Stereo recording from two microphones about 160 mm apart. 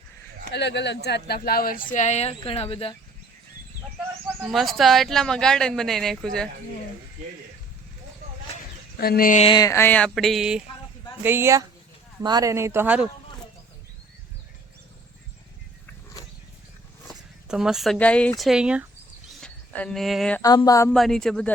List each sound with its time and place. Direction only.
0.5 s speech: 90° left; by 2.9 s 35° left (ahead or behind)
4.5 s speech: centre (ahead or behind)
9.0 s speech: 70° left (ahead or behind)
9.4 s a sound: 30° left (ahead or behind); by 10.6 s centre (ahead or behind)
11.2 s speech: 15° right (ahead or behind)
17.1 s speech: 5° right (ahead or behind)
19.3 s a sound: 5° left (ahead or behind)
20.4 s speech: 25° left (ahead or behind)
20.9 s speech: centre (ahead or behind)